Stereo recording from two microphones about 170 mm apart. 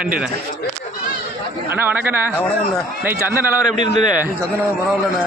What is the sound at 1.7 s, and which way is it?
A man's voice, 10° right (ahead or behind).